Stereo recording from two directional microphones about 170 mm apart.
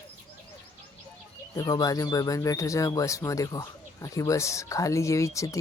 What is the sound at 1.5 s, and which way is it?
Speech, 20° left (ahead or behind).